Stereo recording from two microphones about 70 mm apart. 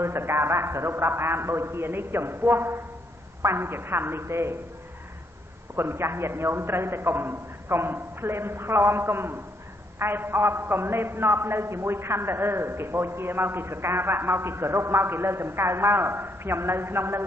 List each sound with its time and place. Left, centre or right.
0.0 s a man's voice: right
5.8 s a man's voice: right